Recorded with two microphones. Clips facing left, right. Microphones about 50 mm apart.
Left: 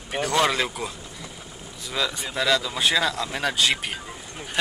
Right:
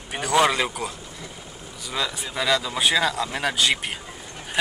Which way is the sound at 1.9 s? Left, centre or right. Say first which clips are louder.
Left 1 dB; centre.